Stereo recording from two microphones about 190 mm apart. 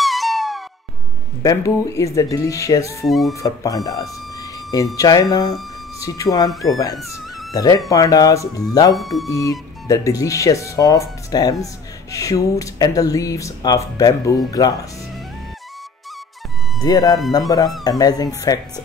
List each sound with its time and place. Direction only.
0.0 s music: centre (ahead or behind)
1.4 s speech: 15° left (ahead or behind)
3.1 s speech: centre (ahead or behind)
3.4 s speech: 20° left (ahead or behind)
7.5 s speech: 20° left (ahead or behind)
8.9 s speech: centre (ahead or behind)
9.3 s speech: 20° left (ahead or behind)
16.8 s speech: 20° left (ahead or behind)